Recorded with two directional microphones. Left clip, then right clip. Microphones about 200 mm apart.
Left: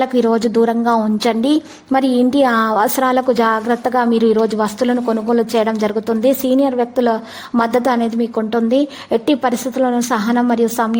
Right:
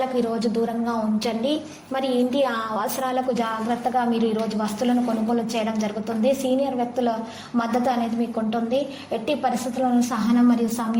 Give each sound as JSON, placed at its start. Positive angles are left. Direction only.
{"t": 0.2, "sound": "a woman's voice", "side_deg": 45}